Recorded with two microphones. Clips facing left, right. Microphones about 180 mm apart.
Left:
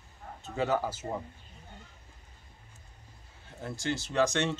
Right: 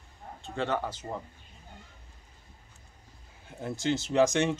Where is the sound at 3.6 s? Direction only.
20° right (ahead or behind).